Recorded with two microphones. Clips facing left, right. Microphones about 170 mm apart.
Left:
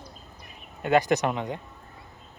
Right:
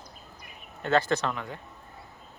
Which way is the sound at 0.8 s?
15° left (ahead or behind).